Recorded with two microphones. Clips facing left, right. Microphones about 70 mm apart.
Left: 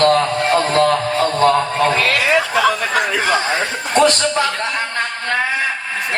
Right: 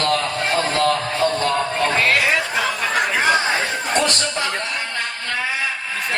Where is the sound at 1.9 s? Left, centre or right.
Left.